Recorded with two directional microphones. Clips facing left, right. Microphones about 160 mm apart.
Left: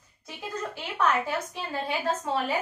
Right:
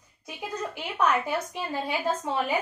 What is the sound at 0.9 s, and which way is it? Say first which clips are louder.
A woman's voice: right 1 dB; 15° right (ahead or behind).